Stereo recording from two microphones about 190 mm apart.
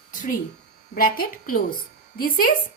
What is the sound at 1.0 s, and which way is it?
A woman's voice, 50° left (ahead or behind).